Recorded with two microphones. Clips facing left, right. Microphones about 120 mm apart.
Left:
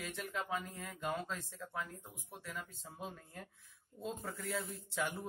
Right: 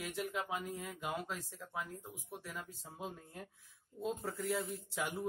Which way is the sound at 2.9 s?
20° right (ahead or behind).